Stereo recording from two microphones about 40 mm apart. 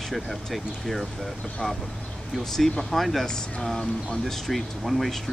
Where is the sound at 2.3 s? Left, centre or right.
Centre.